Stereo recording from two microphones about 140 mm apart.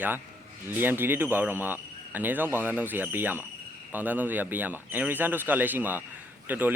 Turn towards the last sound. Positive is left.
turn(degrees=-10)  # may be behind; listen again after turning